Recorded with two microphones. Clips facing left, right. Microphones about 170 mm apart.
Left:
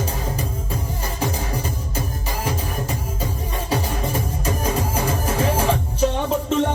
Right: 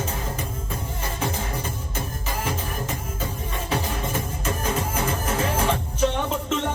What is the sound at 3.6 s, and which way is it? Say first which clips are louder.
Music: left 3 dB; 35° left (ahead or behind).